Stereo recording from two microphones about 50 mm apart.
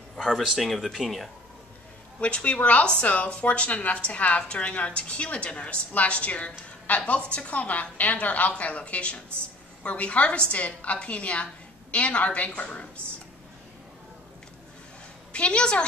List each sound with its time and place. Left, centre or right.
0.2 s speech: centre
2.1 s speech: left
15.3 s speech: left